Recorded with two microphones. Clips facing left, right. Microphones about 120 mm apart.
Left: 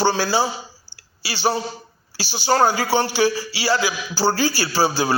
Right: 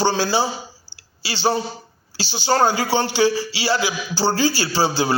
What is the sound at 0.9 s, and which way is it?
Clicking, 40° left (ahead or behind).